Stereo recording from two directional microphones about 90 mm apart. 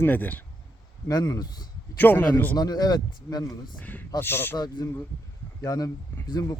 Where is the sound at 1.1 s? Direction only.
45° left (ahead or behind).